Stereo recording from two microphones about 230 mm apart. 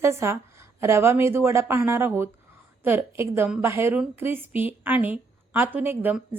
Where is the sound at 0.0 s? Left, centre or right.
Centre.